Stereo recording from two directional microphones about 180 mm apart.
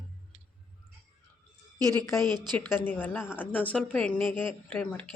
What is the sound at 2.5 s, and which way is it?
Speech, 10° left (ahead or behind).